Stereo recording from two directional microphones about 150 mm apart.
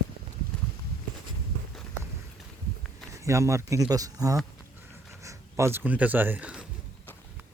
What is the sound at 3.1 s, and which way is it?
Speech, 20° right (ahead or behind).